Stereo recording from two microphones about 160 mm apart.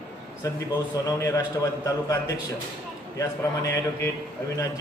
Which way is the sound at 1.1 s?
20° left (ahead or behind).